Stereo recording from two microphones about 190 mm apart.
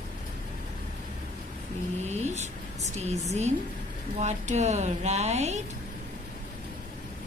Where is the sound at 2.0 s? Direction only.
35° right (ahead or behind).